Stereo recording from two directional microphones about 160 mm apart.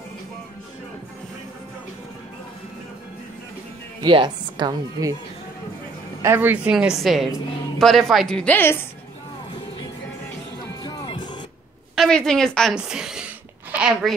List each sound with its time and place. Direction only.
4.0 s speech: 30° right (ahead or behind)
6.2 s a woman's voice: 15° right (ahead or behind); by 8.7 s 10° left (ahead or behind)
10.6 s music: 25° left (ahead or behind)
11.9 s speech: centre (ahead or behind)